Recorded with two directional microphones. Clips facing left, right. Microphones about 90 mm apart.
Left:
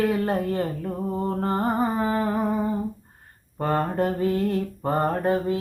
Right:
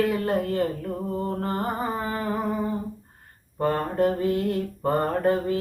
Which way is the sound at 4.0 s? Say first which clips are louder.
Right 1 dB; 40° left (ahead or behind).